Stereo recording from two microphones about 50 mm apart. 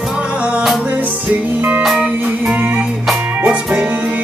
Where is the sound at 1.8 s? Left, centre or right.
Centre.